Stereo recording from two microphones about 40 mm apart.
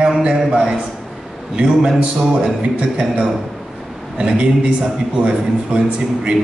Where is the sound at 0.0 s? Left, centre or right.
Right.